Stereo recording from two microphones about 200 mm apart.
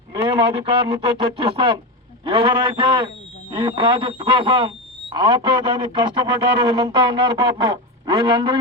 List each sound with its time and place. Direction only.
0.1 s speech: 25° right (ahead or behind)